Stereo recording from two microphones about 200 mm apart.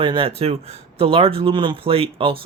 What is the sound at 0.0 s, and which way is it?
Speech, 25° right (ahead or behind).